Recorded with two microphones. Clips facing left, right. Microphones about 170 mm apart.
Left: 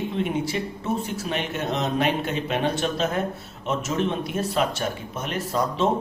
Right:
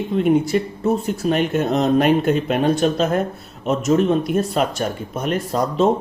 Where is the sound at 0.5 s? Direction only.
45° right (ahead or behind).